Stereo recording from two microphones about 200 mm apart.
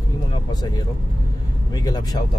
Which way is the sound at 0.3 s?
20° left (ahead or behind).